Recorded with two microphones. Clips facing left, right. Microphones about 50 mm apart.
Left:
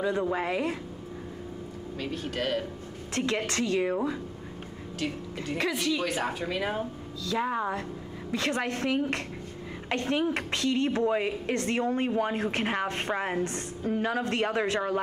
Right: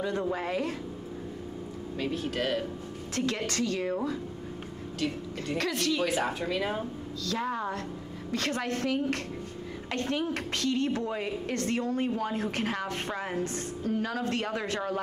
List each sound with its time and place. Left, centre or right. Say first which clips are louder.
0.0 s a woman's voice: left 3 dB; centre
2.2 s speech: left 2 dB; centre
3.2 s a woman's voice: left 2 dB; left
5.6 s a woman's voice: left 1 dB; centre
7.2 s a woman's voice: left 3 dB; centre